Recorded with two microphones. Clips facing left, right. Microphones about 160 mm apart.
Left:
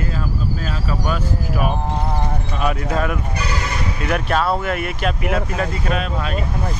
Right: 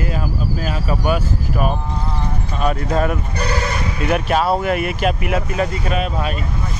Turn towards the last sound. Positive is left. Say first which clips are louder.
# right 1 dB
turn(degrees=-5)  # may be behind; listen again after turning